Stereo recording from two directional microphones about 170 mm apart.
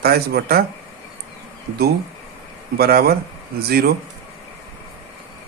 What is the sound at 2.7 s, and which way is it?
Speech, 65° right (ahead or behind).